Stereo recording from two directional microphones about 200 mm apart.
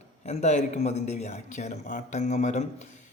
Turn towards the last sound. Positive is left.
turn(degrees=35)  # may be behind; listen again after turning